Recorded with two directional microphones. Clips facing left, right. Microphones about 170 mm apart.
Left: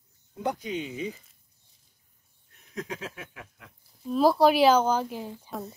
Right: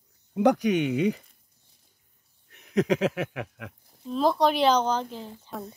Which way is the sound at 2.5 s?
80° right.